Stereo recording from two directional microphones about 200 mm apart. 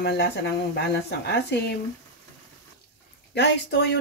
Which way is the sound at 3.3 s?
60° left (ahead or behind).